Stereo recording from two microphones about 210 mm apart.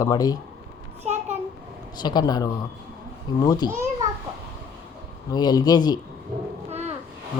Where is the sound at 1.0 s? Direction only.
30° right (ahead or behind).